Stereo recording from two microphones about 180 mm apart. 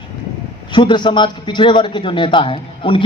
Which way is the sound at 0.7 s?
25° left (ahead or behind).